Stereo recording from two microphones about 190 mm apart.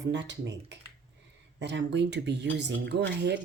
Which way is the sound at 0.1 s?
70° right (ahead or behind).